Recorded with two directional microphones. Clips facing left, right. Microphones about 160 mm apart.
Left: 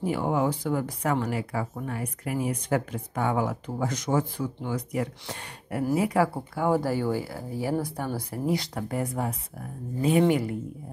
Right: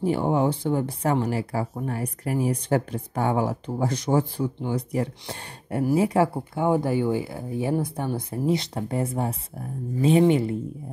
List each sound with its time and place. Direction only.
0.0 s speech: 30° right (ahead or behind)